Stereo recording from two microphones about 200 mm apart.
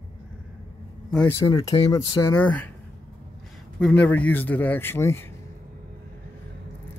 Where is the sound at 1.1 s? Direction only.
10° left (ahead or behind).